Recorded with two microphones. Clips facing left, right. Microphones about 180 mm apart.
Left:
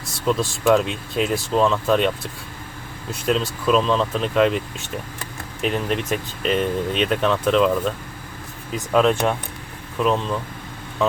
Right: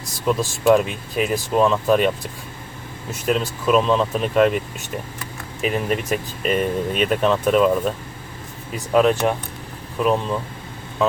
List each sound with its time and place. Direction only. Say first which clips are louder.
0.3 s speech: right 1 dB; 5° right (ahead or behind)
3.2 s speech: even; 5° right (ahead or behind)
5.6 s speech: right 1 dB; 5° right (ahead or behind)